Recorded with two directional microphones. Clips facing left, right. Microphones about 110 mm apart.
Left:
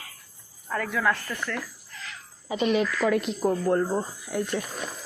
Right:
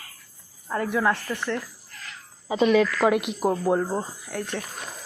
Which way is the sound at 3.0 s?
80° right.